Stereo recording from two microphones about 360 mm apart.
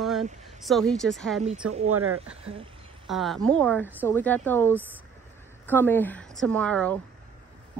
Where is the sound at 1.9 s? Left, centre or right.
Right.